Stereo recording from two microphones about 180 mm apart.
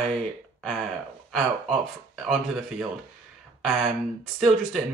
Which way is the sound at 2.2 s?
Centre (ahead or behind).